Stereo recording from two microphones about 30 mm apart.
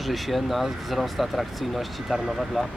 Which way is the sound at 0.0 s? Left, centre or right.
Centre.